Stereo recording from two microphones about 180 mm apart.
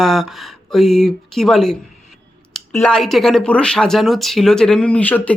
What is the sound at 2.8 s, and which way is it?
A woman's voice, 5° left (ahead or behind).